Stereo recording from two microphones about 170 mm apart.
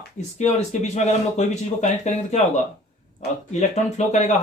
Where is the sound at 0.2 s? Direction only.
40° left (ahead or behind).